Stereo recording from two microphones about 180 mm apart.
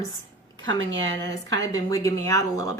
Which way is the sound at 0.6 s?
90° right.